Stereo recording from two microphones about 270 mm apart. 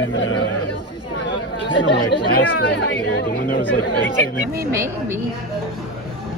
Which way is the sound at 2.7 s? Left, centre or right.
Left.